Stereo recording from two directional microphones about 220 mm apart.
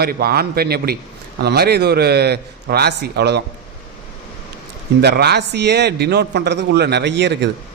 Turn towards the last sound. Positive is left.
turn(degrees=-50)  # may be behind; listen again after turning